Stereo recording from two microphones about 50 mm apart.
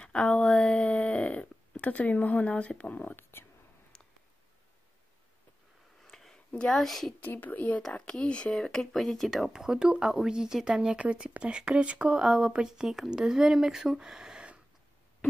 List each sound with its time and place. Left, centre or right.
0.0 s a sound: centre
2.5 s speech: left
3.2 s whispering: left
6.0 s a sound: centre
6.3 s a sound: centre
6.8 s speech: centre
7.2 s a woman's voice: left
7.9 s speech: left
8.5 s speech: centre
9.5 s speech: centre
12.2 s speech: centre